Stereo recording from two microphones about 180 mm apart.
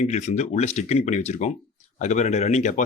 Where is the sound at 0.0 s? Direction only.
40° left (ahead or behind).